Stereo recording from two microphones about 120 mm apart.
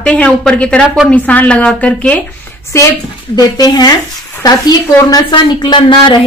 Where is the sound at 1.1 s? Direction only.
10° left (ahead or behind).